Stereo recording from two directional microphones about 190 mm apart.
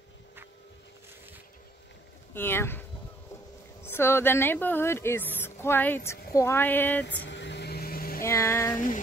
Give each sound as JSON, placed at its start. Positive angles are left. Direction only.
{"t": 2.3, "sound": "a woman's voice", "side_deg": 10}
{"t": 3.8, "sound": "a woman's voice", "side_deg": 10}
{"t": 7.2, "sound": "vehicle", "side_deg": 65}
{"t": 8.2, "sound": "a woman's voice", "side_deg": 15}
{"t": 8.7, "sound": "music", "side_deg": 45}